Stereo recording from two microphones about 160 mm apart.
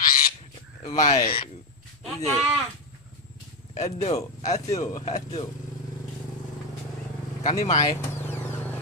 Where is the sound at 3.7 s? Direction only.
45° left (ahead or behind).